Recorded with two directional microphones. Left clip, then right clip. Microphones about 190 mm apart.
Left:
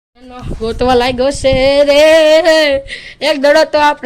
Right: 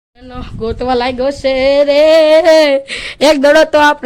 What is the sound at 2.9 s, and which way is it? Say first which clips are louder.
Speech: right 5 dB; 40° right (ahead or behind).